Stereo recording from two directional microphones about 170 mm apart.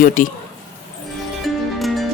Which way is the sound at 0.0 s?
50° left (ahead or behind).